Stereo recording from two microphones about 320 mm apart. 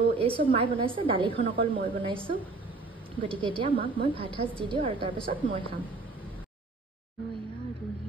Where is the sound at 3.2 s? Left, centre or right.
Centre.